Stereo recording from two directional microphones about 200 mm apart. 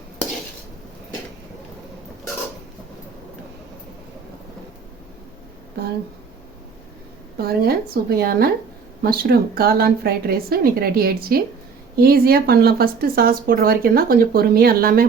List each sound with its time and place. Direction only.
7.3 s speech: 50° right (ahead or behind)